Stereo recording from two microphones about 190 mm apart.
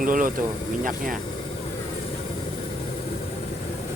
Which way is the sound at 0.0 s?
45° right (ahead or behind).